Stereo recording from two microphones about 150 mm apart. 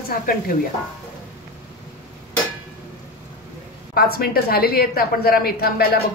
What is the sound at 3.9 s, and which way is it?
A woman's voice, 90° left.